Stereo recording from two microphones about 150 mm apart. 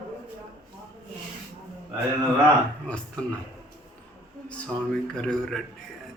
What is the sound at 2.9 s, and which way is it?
Speech, 5° left (ahead or behind).